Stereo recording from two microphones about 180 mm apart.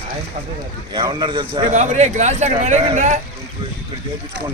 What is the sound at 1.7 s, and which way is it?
Speech, 40° right (ahead or behind).